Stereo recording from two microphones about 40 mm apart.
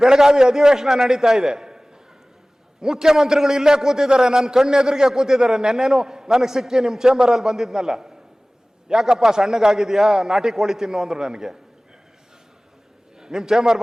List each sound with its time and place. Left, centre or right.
0.0 s a man's voice: centre
13.1 s a man's voice: centre